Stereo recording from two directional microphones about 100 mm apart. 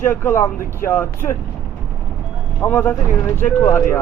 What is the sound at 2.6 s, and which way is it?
Speech, 25° left (ahead or behind).